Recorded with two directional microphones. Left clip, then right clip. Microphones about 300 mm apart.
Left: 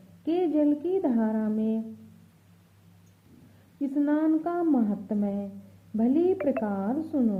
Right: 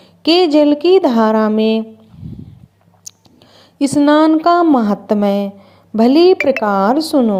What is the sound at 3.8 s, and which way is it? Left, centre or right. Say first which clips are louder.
A woman's voice: right 16 dB; right.